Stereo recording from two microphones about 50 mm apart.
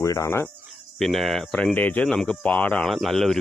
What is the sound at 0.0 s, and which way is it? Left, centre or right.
Cricket, left.